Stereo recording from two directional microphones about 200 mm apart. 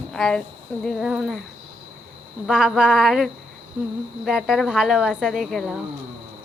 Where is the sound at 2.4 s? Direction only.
5° right (ahead or behind).